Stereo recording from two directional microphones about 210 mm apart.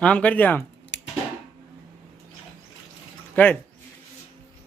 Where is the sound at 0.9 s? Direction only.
55° left (ahead or behind).